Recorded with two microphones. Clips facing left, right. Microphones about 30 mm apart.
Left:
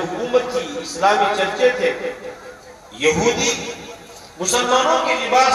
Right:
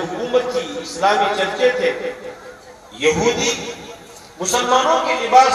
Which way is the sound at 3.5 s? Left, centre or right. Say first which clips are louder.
Even; centre.